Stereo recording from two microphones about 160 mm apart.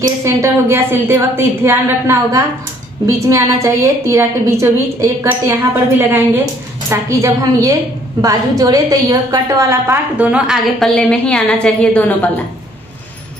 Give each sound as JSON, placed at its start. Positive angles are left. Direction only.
{"t": 0.0, "sound": "a woman's voice", "side_deg": -20}
{"t": 10.3, "sound": "a woman's voice", "side_deg": -5}
{"t": 11.0, "sound": "a woman's voice", "side_deg": 5}